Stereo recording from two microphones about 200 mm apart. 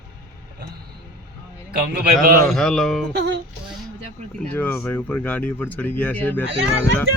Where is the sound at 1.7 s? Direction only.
50° right (ahead or behind).